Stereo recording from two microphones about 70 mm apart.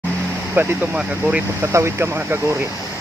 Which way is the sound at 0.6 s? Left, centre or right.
Right.